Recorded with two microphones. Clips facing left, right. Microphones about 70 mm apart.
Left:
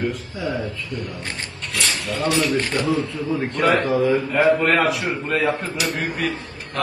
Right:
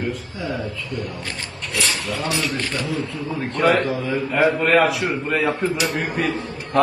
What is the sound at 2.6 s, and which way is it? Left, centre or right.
Speech, left.